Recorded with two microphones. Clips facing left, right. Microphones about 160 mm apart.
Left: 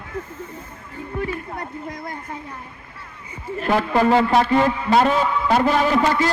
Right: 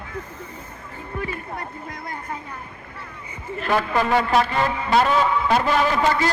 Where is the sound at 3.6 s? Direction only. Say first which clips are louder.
Left 4 dB; 30° left (ahead or behind).